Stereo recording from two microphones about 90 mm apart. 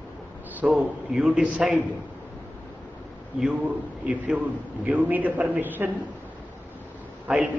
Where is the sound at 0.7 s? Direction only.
5° right (ahead or behind).